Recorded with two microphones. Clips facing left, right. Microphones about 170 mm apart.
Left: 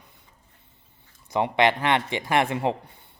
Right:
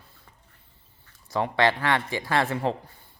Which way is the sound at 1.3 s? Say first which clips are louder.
Left 2 dB; 20° left (ahead or behind).